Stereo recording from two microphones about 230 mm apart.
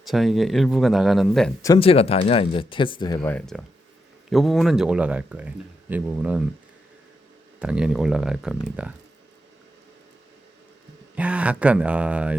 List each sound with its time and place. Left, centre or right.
0.0 s speech: centre
1.6 s speech: left
3.2 s speech: centre
7.6 s speech: centre
11.1 s speech: centre